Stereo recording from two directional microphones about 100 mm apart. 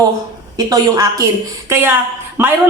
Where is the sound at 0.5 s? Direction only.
35° right (ahead or behind).